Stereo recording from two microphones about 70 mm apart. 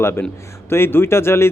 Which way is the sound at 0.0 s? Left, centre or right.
Left.